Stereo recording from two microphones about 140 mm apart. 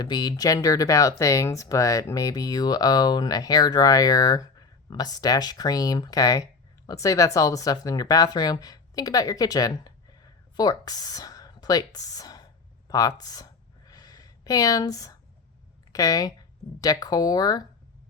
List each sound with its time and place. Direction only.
0.0 s speech: 30° left (ahead or behind)
12.9 s a sound: 25° left (ahead or behind)
15.9 s speech: 25° left (ahead or behind)